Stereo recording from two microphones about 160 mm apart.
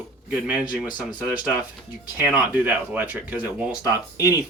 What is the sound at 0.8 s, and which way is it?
Speech, 25° left (ahead or behind).